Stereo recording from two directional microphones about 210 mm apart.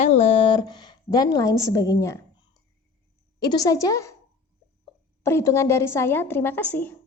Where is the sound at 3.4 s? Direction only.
20° left (ahead or behind).